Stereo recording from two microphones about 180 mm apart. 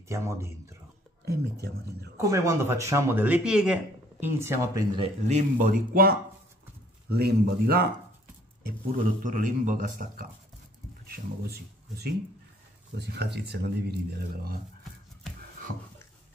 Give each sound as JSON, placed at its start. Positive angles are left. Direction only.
{"t": 0.1, "sound": "speech", "side_deg": -15}
{"t": 1.2, "sound": "speech", "side_deg": -60}
{"t": 2.1, "sound": "speech", "side_deg": -15}
{"t": 4.9, "sound": "speech", "side_deg": -35}
{"t": 5.7, "sound": "speech", "side_deg": -55}
{"t": 8.6, "sound": "a man's voice", "side_deg": -50}